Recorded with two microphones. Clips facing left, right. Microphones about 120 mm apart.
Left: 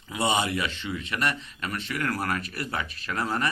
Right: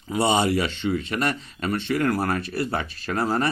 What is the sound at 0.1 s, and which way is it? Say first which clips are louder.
A man's voice: right 5 dB; 35° right (ahead or behind).